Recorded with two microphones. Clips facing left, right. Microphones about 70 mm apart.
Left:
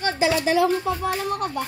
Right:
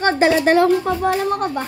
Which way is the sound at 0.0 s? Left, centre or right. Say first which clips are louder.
Right 6 dB; right.